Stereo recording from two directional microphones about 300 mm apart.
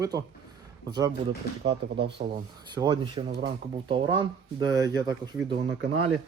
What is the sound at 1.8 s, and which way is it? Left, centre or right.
Speech, centre.